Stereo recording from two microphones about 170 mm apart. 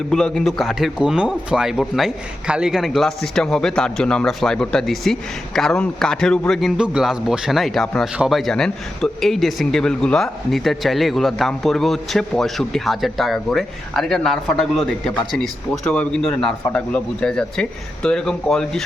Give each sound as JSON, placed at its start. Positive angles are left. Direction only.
{"t": 0.1, "sound": "a man's voice", "side_deg": 5}